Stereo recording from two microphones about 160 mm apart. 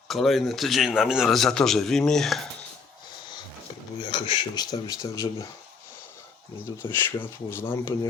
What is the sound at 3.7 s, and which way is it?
Dishes, 30° left (ahead or behind).